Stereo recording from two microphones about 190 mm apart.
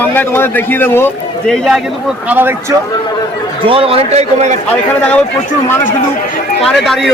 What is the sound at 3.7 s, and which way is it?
Speech, 30° right (ahead or behind).